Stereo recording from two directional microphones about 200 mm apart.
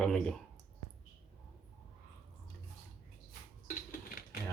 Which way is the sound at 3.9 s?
50° left (ahead or behind).